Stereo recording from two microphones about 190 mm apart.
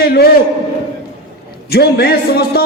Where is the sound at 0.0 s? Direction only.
55° left (ahead or behind).